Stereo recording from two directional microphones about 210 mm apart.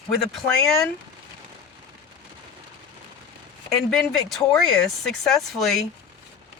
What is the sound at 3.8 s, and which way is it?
Speech, centre (ahead or behind).